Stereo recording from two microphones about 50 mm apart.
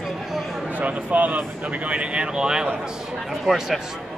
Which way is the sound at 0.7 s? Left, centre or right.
Right.